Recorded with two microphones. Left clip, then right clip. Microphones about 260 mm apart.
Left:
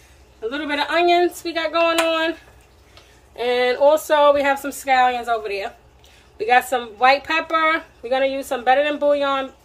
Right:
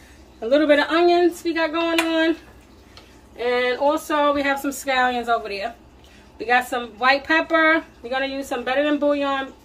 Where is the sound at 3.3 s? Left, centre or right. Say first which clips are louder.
Left 2 dB; left.